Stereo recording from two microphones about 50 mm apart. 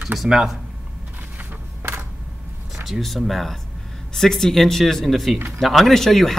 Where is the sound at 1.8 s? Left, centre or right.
Right.